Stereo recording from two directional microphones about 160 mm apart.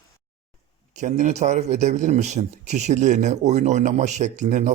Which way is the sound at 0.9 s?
50° right (ahead or behind).